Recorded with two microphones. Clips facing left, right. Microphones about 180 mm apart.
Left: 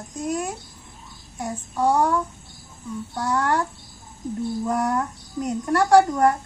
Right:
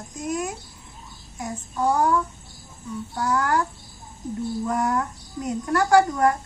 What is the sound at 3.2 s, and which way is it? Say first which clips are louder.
Speech: even; 30° left (ahead or behind).